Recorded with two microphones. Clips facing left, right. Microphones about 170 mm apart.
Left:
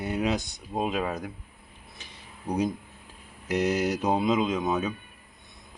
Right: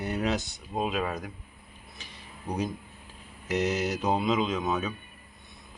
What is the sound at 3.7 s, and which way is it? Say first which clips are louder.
Speech: left 2 dB; 15° left (ahead or behind).